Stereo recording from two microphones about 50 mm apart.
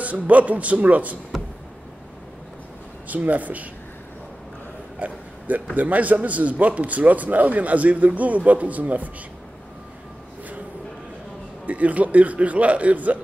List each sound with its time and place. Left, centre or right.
0.0 s a man's voice: right
1.3 s a sound: centre
3.1 s a man's voice: right
4.9 s a sound: right
5.8 s a man's voice: right
11.6 s a man's voice: right